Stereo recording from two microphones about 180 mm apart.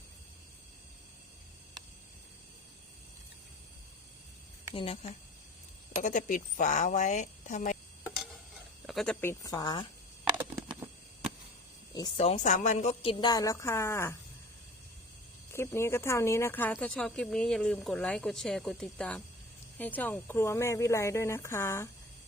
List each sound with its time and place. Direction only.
4.7 s speech: 30° left (ahead or behind)
6.0 s speech: 45° left (ahead or behind)
8.9 s speech: centre (ahead or behind)
9.2 s speech: 20° left (ahead or behind)
10.3 s a sound: 10° right (ahead or behind)
11.9 s speech: 20° left (ahead or behind)
12.2 s speech: 40° left (ahead or behind); by 14.2 s 15° left (ahead or behind)
15.5 s speech: 15° left (ahead or behind)